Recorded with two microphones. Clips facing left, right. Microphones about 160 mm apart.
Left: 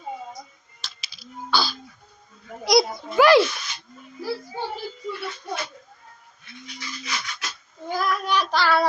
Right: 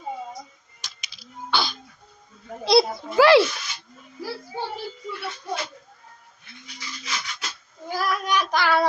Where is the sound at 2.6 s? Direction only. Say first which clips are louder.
Right 1 dB; 30° right (ahead or behind).